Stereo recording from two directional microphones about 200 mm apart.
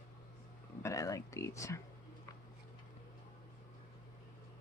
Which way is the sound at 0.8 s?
15° left (ahead or behind).